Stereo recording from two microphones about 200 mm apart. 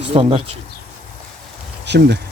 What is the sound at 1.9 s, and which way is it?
Speech, 55° right (ahead or behind).